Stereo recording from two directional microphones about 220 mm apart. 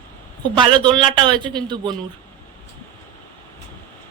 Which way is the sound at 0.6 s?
20° right (ahead or behind).